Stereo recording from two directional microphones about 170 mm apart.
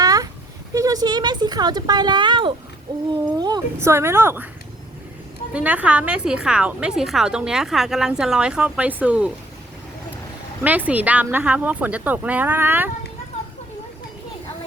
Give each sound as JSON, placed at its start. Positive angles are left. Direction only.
{"t": 0.0, "sound": "a sound", "side_deg": -20}
{"t": 3.3, "sound": "speech", "side_deg": -25}
{"t": 5.5, "sound": "a woman's voice", "side_deg": -10}
{"t": 10.6, "sound": "speech", "side_deg": -10}